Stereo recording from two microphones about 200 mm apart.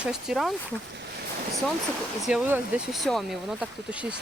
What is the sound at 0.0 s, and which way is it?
Speech, centre (ahead or behind).